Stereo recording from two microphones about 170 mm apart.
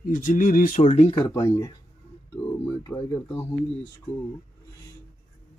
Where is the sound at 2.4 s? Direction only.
10° left (ahead or behind).